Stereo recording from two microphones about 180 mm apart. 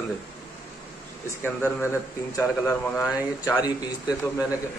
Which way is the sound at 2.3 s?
15° left (ahead or behind).